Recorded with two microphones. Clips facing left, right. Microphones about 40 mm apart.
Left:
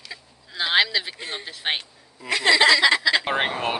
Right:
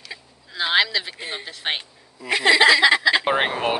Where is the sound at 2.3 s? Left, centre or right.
Centre.